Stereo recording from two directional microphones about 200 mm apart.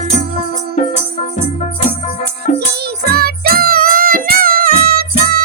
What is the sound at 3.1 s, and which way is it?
Music, 50° right (ahead or behind).